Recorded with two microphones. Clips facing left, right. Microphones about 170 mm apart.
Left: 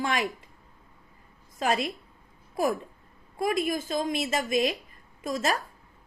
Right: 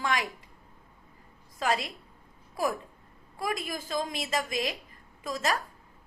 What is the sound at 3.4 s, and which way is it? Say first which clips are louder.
A woman's voice: left 6 dB; 25° left (ahead or behind).